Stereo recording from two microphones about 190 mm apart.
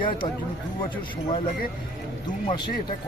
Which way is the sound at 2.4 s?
25° left (ahead or behind).